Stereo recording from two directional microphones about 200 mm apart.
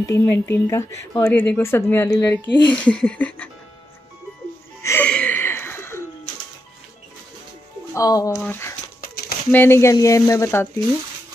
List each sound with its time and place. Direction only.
0.1 s speech: 15° left (ahead or behind)
4.8 s music: 10° left (ahead or behind)
7.9 s speech: 20° left (ahead or behind)
9.0 s a sound: 50° left (ahead or behind)
9.5 s speech: 10° left (ahead or behind)